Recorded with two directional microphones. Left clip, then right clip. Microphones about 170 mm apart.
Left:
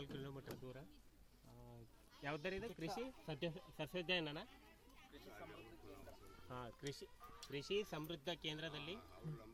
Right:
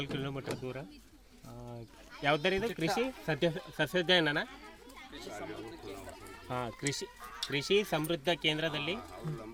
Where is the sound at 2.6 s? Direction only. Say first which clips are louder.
Right 15 dB; 30° right (ahead or behind).